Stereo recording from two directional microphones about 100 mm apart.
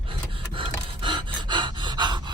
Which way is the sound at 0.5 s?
55° right (ahead or behind).